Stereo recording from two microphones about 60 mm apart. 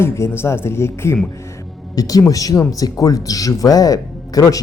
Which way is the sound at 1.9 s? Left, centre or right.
Left.